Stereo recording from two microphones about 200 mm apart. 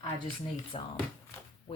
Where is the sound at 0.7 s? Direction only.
30° left (ahead or behind).